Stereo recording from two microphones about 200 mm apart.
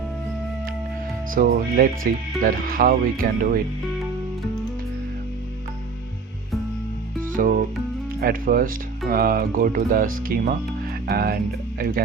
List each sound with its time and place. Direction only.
1.3 s speech: 45° right (ahead or behind)
7.4 s speech: 45° right (ahead or behind)